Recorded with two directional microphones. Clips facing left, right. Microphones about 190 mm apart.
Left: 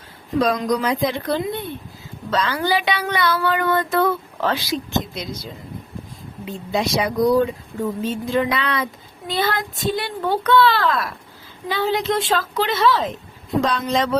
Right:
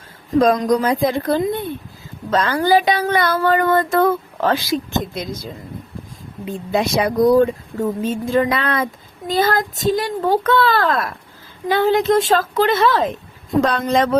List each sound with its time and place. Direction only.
0.3 s speech: 50° right (ahead or behind)
6.7 s speech: 55° right (ahead or behind)